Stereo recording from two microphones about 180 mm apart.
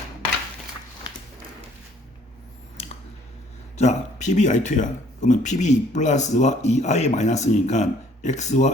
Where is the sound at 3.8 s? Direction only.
40° left (ahead or behind).